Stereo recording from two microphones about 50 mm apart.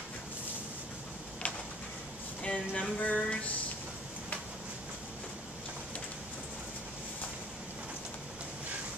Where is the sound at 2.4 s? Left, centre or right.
Left.